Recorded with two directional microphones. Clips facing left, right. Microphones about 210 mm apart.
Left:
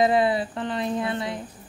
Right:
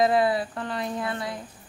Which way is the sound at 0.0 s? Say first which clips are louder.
Left 1 dB; 25° left (ahead or behind).